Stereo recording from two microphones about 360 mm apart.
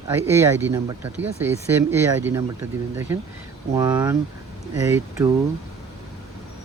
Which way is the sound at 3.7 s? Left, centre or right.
Centre.